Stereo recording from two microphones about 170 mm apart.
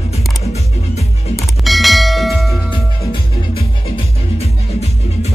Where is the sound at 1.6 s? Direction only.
Centre (ahead or behind).